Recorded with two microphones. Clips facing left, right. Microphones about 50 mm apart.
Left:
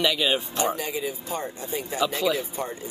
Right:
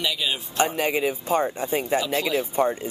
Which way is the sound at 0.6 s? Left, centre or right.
Right.